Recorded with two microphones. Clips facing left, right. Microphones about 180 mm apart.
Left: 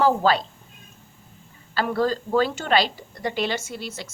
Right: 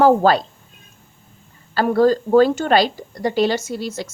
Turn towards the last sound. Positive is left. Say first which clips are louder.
# right 8 dB
turn(degrees=-40)  # may be behind; listen again after turning